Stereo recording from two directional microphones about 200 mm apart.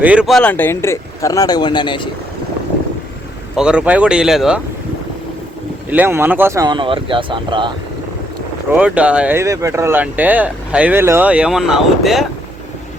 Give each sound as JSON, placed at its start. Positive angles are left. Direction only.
{"t": 0.0, "sound": "speech", "side_deg": -5}
{"t": 3.5, "sound": "speech", "side_deg": -5}
{"t": 5.9, "sound": "speech", "side_deg": -10}
{"t": 8.7, "sound": "speech", "side_deg": -5}